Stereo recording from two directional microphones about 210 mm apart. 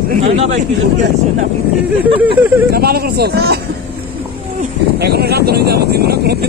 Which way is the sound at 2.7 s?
45° right (ahead or behind).